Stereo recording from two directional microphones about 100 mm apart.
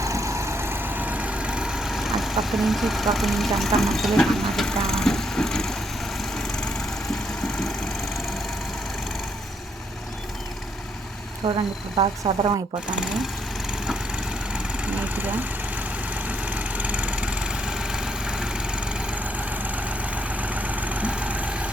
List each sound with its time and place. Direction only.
0.0 s vehicle: 30° right (ahead or behind); by 7.7 s 5° left (ahead or behind)
11.4 s speech: 65° right (ahead or behind)
14.5 s vehicle: 15° right (ahead or behind)